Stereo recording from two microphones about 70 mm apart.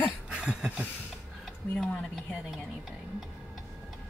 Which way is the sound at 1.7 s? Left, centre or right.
Centre.